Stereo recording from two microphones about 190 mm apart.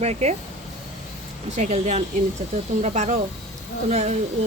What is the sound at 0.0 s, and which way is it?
Speech, 35° right (ahead or behind).